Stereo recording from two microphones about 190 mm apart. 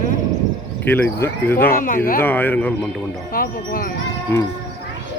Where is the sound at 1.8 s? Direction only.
45° left (ahead or behind).